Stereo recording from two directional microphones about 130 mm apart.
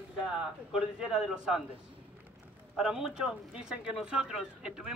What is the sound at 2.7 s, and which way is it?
Speech, 5° right (ahead or behind).